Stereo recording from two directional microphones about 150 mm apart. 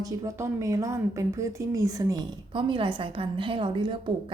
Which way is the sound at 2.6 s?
35° right (ahead or behind).